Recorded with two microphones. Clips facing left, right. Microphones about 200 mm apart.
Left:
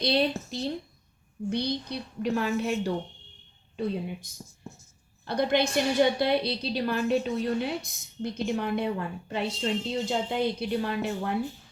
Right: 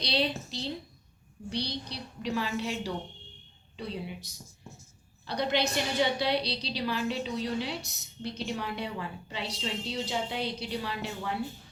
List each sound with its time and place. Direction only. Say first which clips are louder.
0.0 s a woman's voice: left 5 dB; 50° left (ahead or behind)